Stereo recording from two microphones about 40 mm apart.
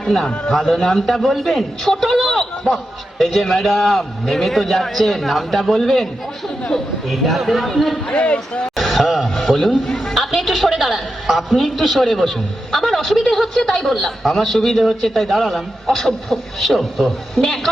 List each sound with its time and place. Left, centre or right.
0.0 s a man's voice: centre
7.1 s a man's voice: centre
8.1 s speech: left
8.7 s a sound: centre
9.3 s a man's voice: centre